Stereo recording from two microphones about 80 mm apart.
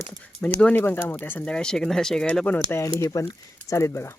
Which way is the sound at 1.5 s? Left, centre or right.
Centre.